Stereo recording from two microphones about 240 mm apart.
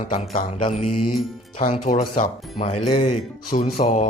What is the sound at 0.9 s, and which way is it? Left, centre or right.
Music, left.